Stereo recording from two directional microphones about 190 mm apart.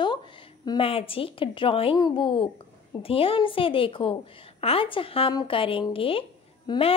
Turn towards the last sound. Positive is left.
turn(degrees=30)  # may be behind; listen again after turning